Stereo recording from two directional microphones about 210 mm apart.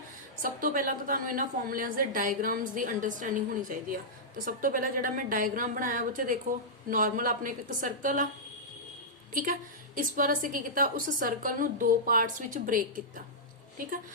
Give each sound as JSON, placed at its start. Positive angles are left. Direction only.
{"t": 0.4, "sound": "a woman's voice", "side_deg": -40}
{"t": 9.3, "sound": "a woman's voice", "side_deg": -40}